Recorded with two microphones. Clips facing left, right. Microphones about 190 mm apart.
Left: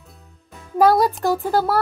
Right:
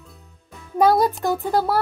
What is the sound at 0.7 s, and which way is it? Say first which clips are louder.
A child's voice: left 1 dB; centre (ahead or behind).